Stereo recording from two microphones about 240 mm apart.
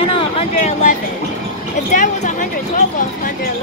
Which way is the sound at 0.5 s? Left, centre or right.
Left.